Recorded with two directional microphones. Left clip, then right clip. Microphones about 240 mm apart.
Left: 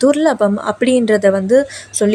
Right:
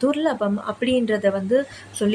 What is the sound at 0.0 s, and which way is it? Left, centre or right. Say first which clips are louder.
A woman's voice: left 9 dB; left.